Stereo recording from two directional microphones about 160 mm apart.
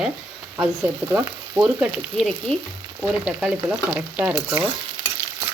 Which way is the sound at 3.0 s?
5° right (ahead or behind).